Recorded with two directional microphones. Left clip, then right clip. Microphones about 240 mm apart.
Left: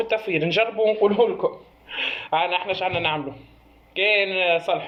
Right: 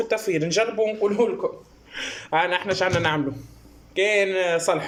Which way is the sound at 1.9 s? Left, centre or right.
Right.